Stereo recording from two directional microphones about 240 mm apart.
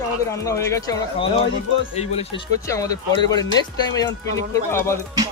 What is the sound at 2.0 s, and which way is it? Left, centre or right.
Speech, left.